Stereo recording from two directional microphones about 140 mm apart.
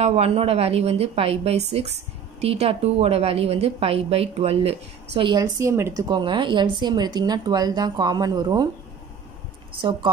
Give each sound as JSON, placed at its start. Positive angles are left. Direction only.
{"t": 0.0, "sound": "a woman's voice", "side_deg": -50}
{"t": 5.3, "sound": "a woman's voice", "side_deg": -25}
{"t": 6.0, "sound": "speech", "side_deg": -35}